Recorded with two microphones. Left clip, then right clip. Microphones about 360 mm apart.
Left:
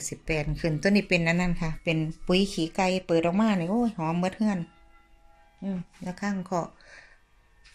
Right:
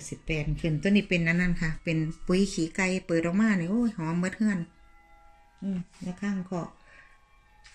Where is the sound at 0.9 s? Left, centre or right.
Centre.